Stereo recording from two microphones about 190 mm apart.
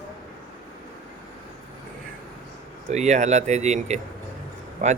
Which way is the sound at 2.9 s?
35° right (ahead or behind).